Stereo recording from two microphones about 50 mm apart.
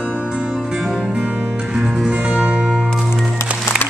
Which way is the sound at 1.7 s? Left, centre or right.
Centre.